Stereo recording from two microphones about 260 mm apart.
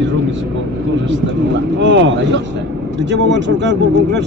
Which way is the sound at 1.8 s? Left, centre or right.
Right.